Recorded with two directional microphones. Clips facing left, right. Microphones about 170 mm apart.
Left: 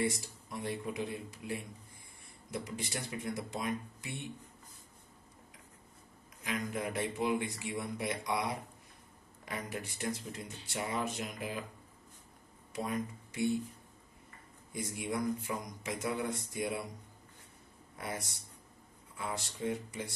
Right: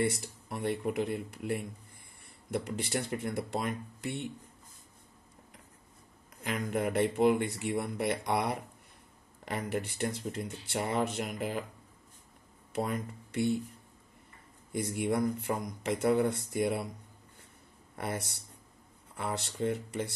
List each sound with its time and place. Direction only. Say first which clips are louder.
0.1 s speech: right 3 dB; 65° right (ahead or behind)
6.4 s speech: right 5 dB; 60° right (ahead or behind)
12.7 s speech: right 3 dB; 65° right (ahead or behind)
14.7 s speech: right 7 dB; 65° right (ahead or behind)
17.9 s speech: right 5 dB; 60° right (ahead or behind)